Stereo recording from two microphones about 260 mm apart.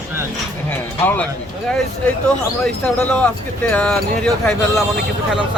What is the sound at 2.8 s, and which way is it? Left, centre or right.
A man's voice, centre.